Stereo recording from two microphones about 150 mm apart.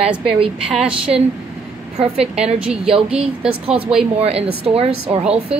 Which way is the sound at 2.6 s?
5° right (ahead or behind).